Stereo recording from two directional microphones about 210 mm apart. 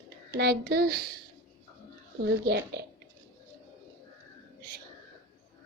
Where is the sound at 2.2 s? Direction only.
55° right (ahead or behind).